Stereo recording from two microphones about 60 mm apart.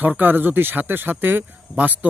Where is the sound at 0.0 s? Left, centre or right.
Right.